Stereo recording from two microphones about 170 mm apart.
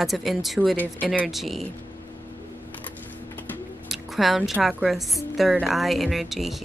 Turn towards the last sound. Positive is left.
turn(degrees=0)  # may be behind; listen again after turning